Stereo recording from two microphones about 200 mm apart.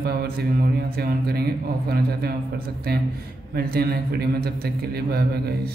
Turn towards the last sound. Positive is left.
turn(degrees=-50)  # may be behind; listen again after turning